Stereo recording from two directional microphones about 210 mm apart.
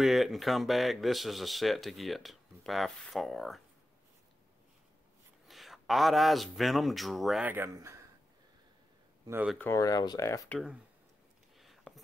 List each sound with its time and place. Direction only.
0.0 s speech: centre (ahead or behind)
5.5 s speech: centre (ahead or behind)
9.2 s speech: 10° right (ahead or behind)
9.6 s speech: 15° left (ahead or behind)
11.5 s a sound: centre (ahead or behind)